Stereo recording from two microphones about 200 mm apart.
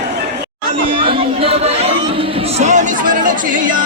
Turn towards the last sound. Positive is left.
turn(degrees=-40)  # may be behind; listen again after turning